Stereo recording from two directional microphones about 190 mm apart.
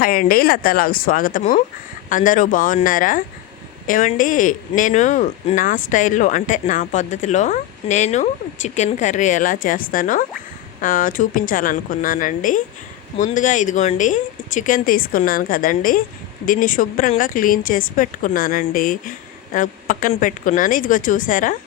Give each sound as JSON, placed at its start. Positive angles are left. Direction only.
{"t": 0.0, "sound": "speech", "side_deg": 50}